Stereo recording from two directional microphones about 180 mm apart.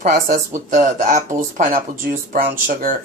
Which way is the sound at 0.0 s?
45° right (ahead or behind).